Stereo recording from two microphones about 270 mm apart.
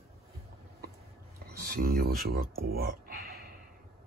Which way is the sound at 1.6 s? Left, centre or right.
Right.